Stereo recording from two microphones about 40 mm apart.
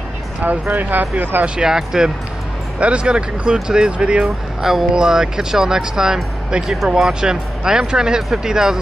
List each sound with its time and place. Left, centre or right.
0.4 s speech: right
1.6 s speech: centre
2.8 s speech: right
4.6 s speech: centre